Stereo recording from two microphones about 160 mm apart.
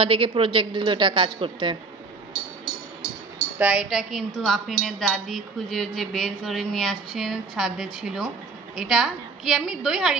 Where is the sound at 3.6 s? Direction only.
5° right (ahead or behind).